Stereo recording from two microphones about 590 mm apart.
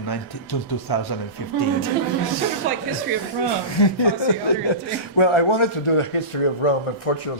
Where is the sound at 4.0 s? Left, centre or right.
Left.